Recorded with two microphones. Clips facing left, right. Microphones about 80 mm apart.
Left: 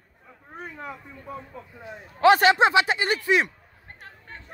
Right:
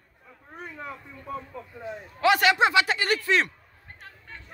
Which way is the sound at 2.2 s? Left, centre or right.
Left.